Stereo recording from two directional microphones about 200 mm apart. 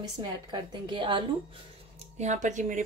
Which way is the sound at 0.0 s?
25° right (ahead or behind).